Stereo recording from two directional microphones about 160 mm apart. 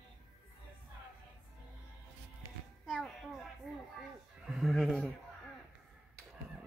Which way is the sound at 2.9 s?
Centre (ahead or behind).